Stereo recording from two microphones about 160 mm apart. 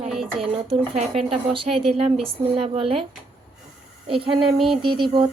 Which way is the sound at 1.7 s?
Centre (ahead or behind).